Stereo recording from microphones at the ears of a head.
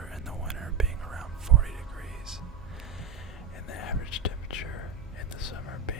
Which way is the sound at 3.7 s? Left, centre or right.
Left.